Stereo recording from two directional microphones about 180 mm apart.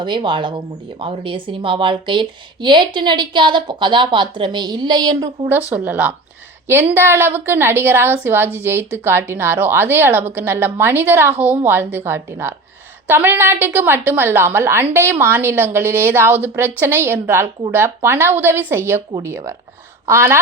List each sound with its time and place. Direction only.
0.0 s a woman's voice: 25° right (ahead or behind)
5.7 s a woman's voice: 10° right (ahead or behind)